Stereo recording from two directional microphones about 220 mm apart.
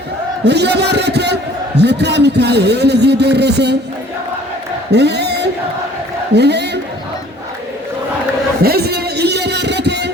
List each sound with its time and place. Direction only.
0.4 s a man's voice: 50° right (ahead or behind)
4.9 s a sound: 50° right (ahead or behind)
6.3 s a man's voice: 50° right (ahead or behind)
8.6 s music: 45° right (ahead or behind)